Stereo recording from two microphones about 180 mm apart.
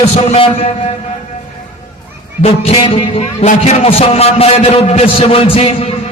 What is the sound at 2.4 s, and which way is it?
A man's voice, 30° left (ahead or behind).